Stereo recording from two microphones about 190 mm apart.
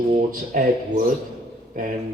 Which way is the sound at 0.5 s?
45° right (ahead or behind).